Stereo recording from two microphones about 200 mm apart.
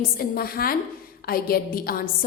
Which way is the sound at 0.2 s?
50° left (ahead or behind).